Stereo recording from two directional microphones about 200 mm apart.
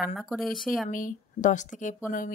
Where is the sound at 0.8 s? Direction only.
40° left (ahead or behind).